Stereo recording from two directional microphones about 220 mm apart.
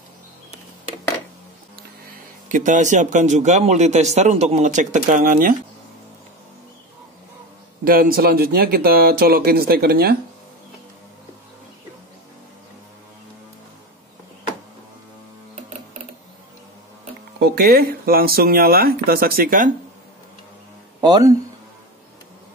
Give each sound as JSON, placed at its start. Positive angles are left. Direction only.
{"t": 2.5, "sound": "a man's voice", "side_deg": -35}
{"t": 7.8, "sound": "speech", "side_deg": -40}
{"t": 17.4, "sound": "speech", "side_deg": -45}
{"t": 21.0, "sound": "speech", "side_deg": -15}